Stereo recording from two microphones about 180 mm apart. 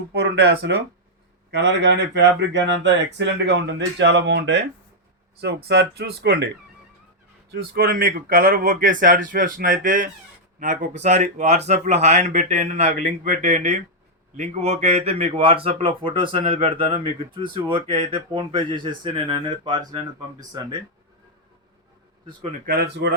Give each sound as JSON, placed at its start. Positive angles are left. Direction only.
{"t": 0.1, "sound": "speech", "side_deg": -70}
{"t": 7.5, "sound": "speech", "side_deg": -55}
{"t": 22.6, "sound": "speech", "side_deg": -55}